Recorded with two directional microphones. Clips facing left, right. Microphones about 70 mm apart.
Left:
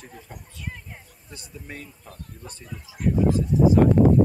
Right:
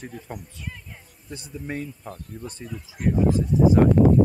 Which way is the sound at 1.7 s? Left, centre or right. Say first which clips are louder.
Right 9 dB; right.